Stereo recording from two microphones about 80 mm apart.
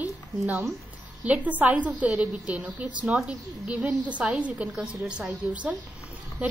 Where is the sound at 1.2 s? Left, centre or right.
Centre.